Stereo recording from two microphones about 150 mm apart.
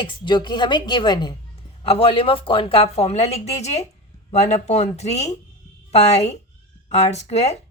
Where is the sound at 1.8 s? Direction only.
40° left (ahead or behind).